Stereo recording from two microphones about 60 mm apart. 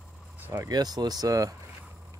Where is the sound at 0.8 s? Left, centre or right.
Right.